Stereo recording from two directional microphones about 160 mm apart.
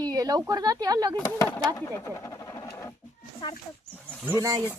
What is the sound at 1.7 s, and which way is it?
Speech, 15° left (ahead or behind).